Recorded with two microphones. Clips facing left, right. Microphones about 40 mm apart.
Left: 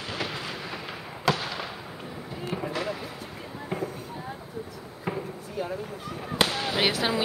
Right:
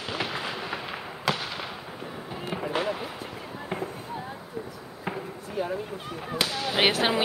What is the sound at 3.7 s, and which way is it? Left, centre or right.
Fireworks, right.